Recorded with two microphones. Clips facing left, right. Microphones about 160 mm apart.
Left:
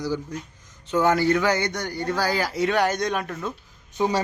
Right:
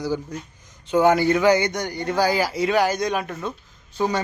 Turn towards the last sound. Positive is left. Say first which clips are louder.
# even
turn(degrees=15)  # may be behind; listen again after turning